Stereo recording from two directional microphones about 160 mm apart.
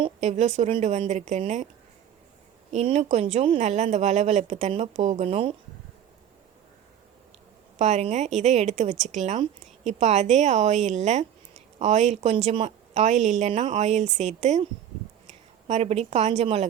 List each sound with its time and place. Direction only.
0.0 s speech: 45° right (ahead or behind)
2.7 s speech: 40° right (ahead or behind)
7.8 s a woman's voice: 45° right (ahead or behind)